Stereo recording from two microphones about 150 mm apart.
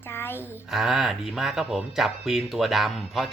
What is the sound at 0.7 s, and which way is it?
Speech, 5° right (ahead or behind).